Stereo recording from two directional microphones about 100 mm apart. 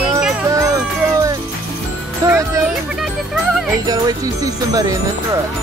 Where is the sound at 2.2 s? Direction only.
30° right (ahead or behind).